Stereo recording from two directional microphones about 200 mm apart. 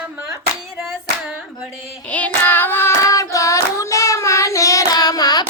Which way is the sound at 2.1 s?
5° left (ahead or behind).